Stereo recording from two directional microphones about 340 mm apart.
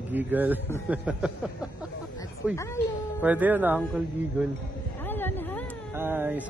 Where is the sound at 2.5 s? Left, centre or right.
Centre.